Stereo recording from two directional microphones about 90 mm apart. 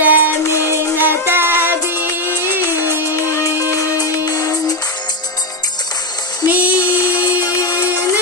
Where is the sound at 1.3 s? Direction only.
25° right (ahead or behind).